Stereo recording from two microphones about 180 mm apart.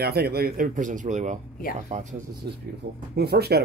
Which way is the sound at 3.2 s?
65° right (ahead or behind).